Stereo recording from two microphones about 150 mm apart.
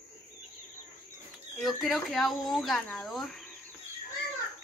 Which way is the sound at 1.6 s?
Centre (ahead or behind).